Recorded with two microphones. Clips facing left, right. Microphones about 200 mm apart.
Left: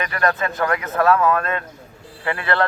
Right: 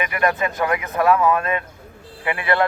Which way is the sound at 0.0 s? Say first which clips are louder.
Right 1 dB; 15° right (ahead or behind).